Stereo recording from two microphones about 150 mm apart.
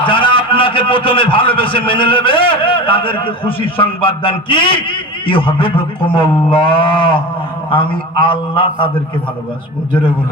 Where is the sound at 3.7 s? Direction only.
35° left (ahead or behind).